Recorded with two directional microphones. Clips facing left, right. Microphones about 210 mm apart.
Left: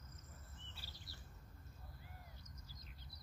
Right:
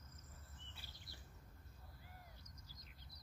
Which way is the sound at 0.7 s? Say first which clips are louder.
Left 1 dB; 55° right (ahead or behind).